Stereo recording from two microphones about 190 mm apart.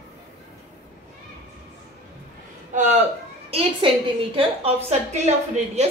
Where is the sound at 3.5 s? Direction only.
30° right (ahead or behind).